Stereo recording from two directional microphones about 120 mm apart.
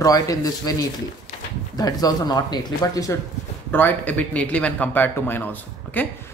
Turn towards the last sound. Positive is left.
turn(degrees=15)  # may be behind; listen again after turning